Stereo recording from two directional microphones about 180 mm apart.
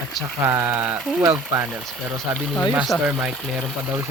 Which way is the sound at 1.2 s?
15° right (ahead or behind).